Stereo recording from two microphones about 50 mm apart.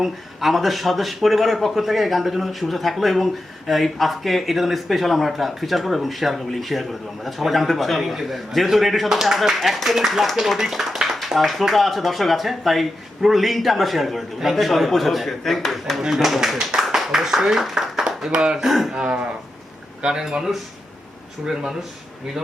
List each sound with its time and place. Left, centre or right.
0.0 s speech: centre
18.9 s speech: centre